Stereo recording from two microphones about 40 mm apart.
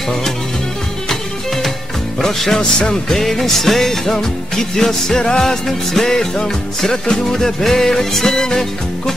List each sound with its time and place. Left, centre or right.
1.0 s music: centre
3.2 s music: centre